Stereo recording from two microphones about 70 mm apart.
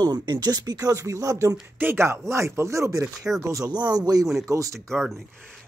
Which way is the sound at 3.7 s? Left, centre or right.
Right.